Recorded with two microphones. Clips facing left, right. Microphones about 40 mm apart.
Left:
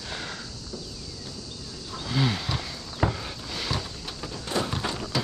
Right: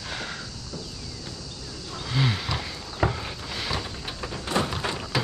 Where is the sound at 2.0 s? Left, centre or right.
Centre.